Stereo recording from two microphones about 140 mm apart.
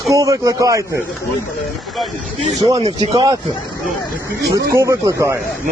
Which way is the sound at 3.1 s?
25° right (ahead or behind).